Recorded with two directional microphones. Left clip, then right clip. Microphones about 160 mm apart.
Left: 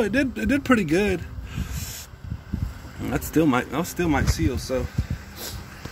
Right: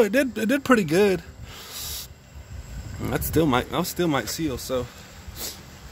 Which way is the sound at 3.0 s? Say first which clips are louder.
Left 1 dB; 40° right (ahead or behind).